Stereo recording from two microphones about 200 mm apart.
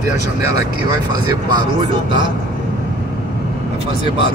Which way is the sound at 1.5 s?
25° right (ahead or behind).